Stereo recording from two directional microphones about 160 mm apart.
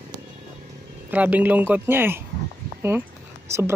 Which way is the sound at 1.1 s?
10° right (ahead or behind).